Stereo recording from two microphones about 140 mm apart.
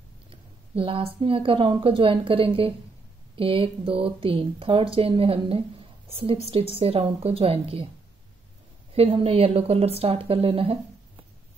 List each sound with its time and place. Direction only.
0.3 s a woman's voice: 40° right (ahead or behind)
8.9 s a woman's voice: 45° right (ahead or behind)